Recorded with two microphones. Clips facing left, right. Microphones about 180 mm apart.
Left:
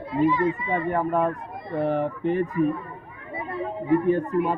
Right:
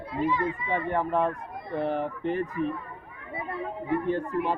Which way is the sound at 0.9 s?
Centre (ahead or behind).